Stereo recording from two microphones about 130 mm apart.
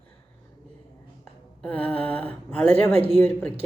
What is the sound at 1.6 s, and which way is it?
Speech, 10° left (ahead or behind).